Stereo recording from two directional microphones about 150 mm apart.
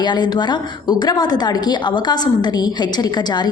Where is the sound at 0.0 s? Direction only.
30° left (ahead or behind).